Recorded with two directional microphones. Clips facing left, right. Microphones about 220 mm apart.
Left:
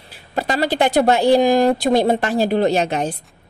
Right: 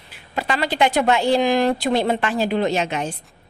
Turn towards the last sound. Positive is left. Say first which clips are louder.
# left 4 dB
turn(degrees=35)  # may be behind; listen again after turning